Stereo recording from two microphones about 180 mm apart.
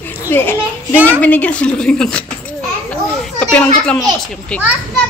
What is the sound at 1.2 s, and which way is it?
A child's voice, 10° left (ahead or behind).